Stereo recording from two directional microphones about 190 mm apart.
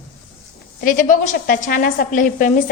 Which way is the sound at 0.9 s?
45° left (ahead or behind).